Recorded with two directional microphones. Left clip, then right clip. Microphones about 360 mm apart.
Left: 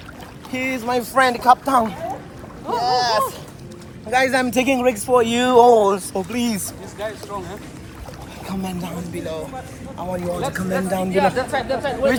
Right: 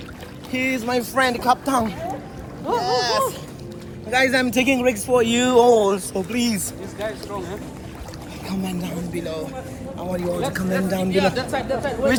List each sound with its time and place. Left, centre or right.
0.5 s speech: centre
2.7 s boat: centre
4.1 s speech: centre
7.0 s speech: centre
11.1 s speech: centre